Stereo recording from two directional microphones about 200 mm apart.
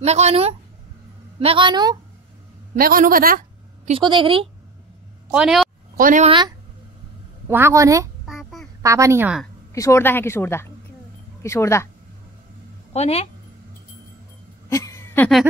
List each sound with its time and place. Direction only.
0.0 s a woman's voice: 30° right (ahead or behind)
2.8 s a woman's voice: 45° right (ahead or behind)
3.9 s a woman's voice: 25° right (ahead or behind)
5.3 s speech: 5° right (ahead or behind)
5.9 s speech: 45° right (ahead or behind)
6.2 s a woman's voice: 25° right (ahead or behind)
7.4 s speech: 10° right (ahead or behind)
8.3 s a sound: centre (ahead or behind)
8.8 s speech: 15° right (ahead or behind)
9.8 s a woman's voice: 15° left (ahead or behind)
12.9 s speech: 30° left (ahead or behind)
14.7 s a sound: 15° left (ahead or behind)